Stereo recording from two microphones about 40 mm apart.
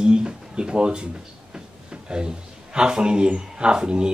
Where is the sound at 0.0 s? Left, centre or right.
Right.